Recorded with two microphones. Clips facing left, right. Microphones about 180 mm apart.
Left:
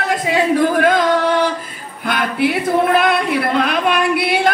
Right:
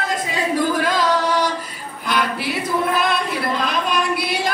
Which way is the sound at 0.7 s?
55° left (ahead or behind).